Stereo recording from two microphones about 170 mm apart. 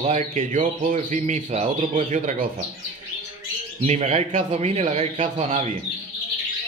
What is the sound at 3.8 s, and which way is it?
A man's voice, 40° right (ahead or behind).